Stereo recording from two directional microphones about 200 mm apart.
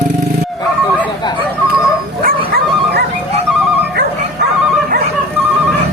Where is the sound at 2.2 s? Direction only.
50° right (ahead or behind).